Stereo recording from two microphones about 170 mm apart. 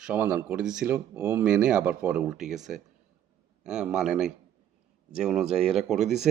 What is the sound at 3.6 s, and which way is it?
Speech, 5° right (ahead or behind).